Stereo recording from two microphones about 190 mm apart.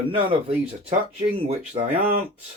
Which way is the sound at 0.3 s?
30° right (ahead or behind).